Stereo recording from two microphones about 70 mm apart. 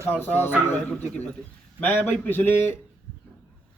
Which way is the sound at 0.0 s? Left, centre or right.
Left.